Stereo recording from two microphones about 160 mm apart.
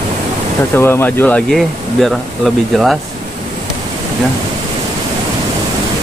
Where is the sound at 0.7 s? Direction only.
15° left (ahead or behind).